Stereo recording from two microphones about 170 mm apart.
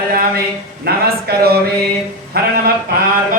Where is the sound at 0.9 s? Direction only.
65° right (ahead or behind).